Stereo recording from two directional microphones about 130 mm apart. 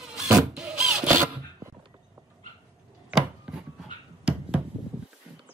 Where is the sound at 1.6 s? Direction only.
25° right (ahead or behind).